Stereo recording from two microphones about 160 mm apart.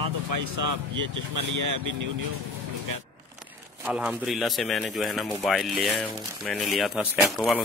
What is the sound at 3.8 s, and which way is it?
Speech, 5° right (ahead or behind).